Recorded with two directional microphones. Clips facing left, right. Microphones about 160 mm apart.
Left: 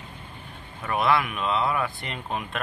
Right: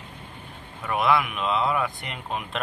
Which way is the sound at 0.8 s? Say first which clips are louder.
Right 1 dB; 15° right (ahead or behind).